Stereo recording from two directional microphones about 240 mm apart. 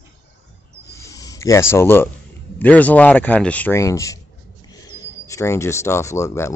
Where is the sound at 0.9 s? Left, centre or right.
Centre.